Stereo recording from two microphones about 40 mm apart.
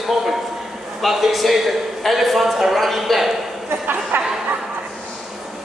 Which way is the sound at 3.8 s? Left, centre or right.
Right.